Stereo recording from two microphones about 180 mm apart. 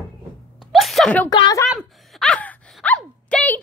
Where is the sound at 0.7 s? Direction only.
Centre (ahead or behind).